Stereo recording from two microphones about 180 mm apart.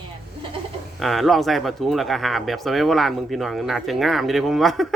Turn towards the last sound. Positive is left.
turn(degrees=0)  # may be behind; listen again after turning